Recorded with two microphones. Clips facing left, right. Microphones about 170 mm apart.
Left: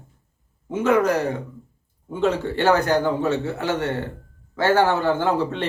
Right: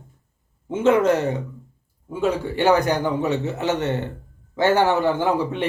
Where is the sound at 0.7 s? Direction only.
25° right (ahead or behind).